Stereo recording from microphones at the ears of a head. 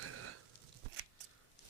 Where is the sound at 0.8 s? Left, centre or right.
Right.